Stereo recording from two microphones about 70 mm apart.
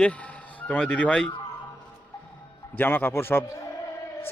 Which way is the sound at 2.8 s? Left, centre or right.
Left.